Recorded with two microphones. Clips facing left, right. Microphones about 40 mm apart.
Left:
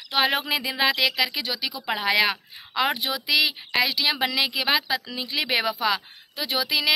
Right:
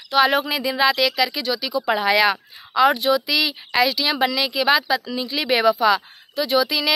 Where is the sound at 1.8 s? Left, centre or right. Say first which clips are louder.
Right 4 dB; centre.